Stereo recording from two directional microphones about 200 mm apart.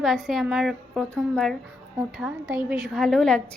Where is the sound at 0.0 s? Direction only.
Centre (ahead or behind).